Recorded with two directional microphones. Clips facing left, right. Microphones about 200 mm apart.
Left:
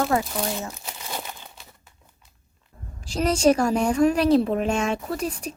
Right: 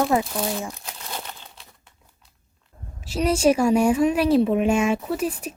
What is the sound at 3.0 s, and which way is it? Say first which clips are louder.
A woman's voice: even; 5° right (ahead or behind).